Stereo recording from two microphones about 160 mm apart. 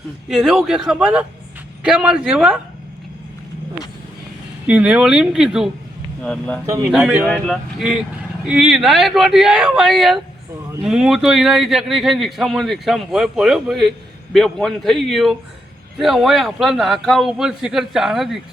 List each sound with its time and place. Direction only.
0.3 s a man's voice: centre (ahead or behind)
4.6 s a man's voice: 10° right (ahead or behind)
6.7 s a man's voice: 20° right (ahead or behind)
6.9 s a man's voice: 5° right (ahead or behind)